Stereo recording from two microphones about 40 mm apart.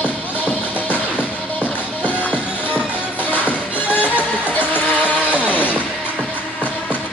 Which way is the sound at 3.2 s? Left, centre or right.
Left.